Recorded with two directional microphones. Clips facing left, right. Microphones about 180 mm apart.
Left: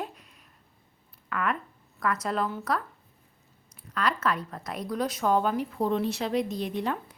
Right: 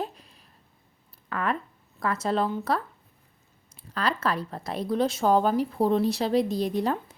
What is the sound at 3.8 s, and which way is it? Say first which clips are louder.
Speech: right 1 dB; 30° right (ahead or behind).